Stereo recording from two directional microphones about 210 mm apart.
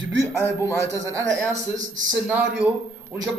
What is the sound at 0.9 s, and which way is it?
A man's voice, 15° right (ahead or behind).